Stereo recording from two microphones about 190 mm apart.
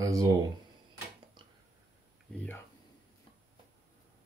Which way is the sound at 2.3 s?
10° left (ahead or behind).